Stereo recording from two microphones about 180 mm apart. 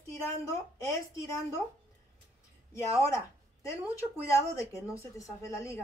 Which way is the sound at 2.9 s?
15° left (ahead or behind).